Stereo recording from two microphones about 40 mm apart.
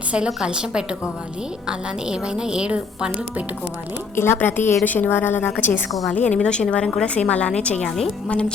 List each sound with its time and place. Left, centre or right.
0.4 s a woman's voice: right
4.1 s a woman's voice: left
4.4 s a woman's voice: left
5.5 s a woman's voice: left
5.9 s a woman's voice: centre
6.1 s a woman's voice: left
7.9 s a woman's voice: centre
8.3 s a woman's voice: left